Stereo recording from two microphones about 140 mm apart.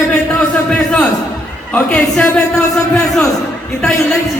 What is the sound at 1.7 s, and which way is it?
Speech, 10° left (ahead or behind).